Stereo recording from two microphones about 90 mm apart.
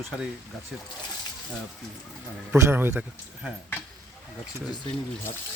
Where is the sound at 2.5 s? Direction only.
30° right (ahead or behind).